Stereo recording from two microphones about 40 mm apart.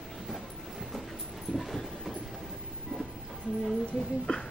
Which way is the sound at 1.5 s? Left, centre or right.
Centre.